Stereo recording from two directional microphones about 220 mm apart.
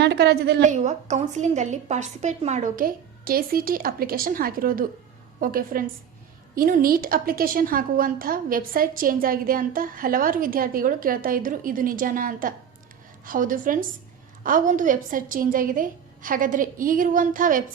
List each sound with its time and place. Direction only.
0.0 s a woman's voice: 50° right (ahead or behind)
0.6 s a woman's voice: 35° right (ahead or behind)